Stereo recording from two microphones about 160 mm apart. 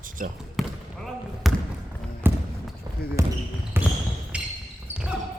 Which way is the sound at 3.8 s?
15° right (ahead or behind).